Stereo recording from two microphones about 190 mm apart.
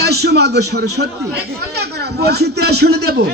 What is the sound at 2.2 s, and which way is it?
Speech, 60° right (ahead or behind).